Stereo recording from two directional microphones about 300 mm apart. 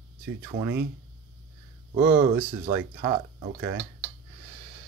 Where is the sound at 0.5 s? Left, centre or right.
Right.